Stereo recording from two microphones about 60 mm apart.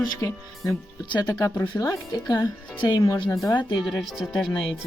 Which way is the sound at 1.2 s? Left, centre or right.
Left.